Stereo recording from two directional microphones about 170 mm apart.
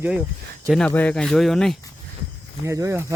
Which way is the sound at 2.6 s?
15° right (ahead or behind).